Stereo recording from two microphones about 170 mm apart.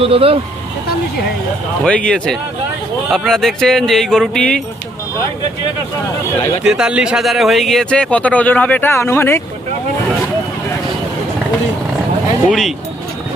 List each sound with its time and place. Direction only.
0.0 s speech: 35° right (ahead or behind)
1.8 s speech: 5° left (ahead or behind)
6.7 s speech: 5° right (ahead or behind); by 9.4 s 15° left (ahead or behind)
12.5 s speech: centre (ahead or behind)